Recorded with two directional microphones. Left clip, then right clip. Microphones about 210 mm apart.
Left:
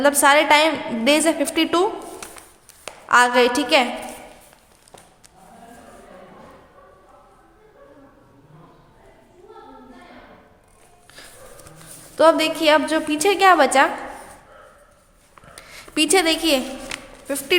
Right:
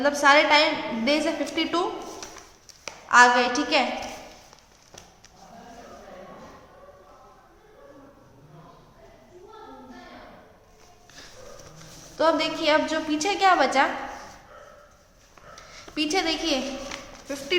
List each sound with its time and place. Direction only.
0.0 s a woman's voice: 50° left (ahead or behind)
3.1 s a woman's voice: 50° left (ahead or behind)
12.1 s a woman's voice: 45° left (ahead or behind)
15.5 s a sound: 45° left (ahead or behind)